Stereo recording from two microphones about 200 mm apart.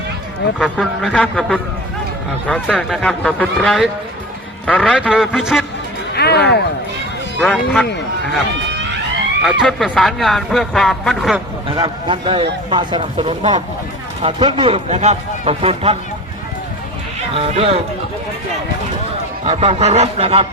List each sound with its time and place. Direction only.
0.8 s speech: 5° left (ahead or behind)
6.1 s speech: 55° left (ahead or behind)
7.3 s speech: 5° left (ahead or behind)
9.4 s speech: centre (ahead or behind)
11.7 s a man's voice: 25° right (ahead or behind)
17.3 s speech: 30° right (ahead or behind)
19.5 s a man's voice: 30° right (ahead or behind)